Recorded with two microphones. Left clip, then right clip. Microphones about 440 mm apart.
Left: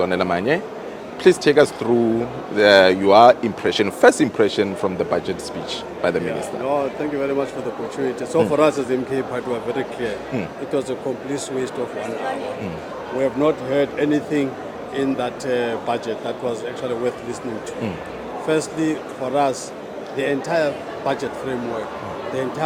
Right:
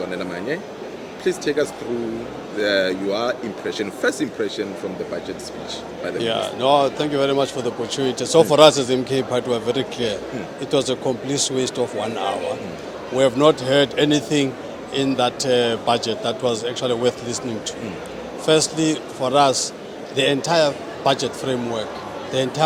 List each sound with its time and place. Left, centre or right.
0.1 s speech: left
6.7 s a man's voice: right
13.1 s a man's voice: right
18.4 s a man's voice: right